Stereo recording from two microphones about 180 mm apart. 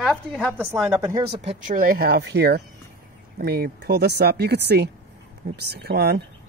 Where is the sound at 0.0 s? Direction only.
Centre (ahead or behind).